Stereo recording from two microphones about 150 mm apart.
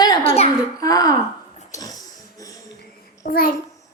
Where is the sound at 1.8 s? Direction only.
25° left (ahead or behind).